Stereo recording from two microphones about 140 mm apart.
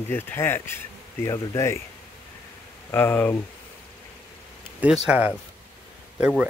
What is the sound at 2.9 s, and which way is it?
Speech, 15° left (ahead or behind).